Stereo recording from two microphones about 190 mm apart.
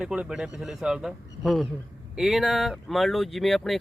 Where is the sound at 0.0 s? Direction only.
5° right (ahead or behind).